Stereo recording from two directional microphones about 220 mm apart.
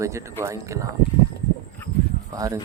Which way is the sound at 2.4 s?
15° right (ahead or behind).